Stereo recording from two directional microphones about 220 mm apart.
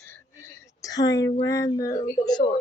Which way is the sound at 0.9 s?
15° left (ahead or behind).